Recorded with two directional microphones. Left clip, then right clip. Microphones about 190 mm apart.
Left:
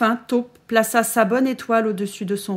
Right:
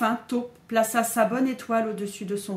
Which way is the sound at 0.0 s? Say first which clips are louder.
Left 6 dB; 55° left (ahead or behind).